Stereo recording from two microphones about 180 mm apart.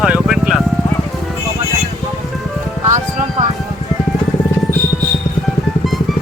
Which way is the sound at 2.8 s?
45° right (ahead or behind).